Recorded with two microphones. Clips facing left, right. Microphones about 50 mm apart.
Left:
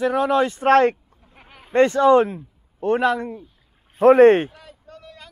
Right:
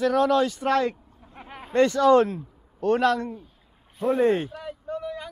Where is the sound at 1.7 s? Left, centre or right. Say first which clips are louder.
Left 3 dB; left.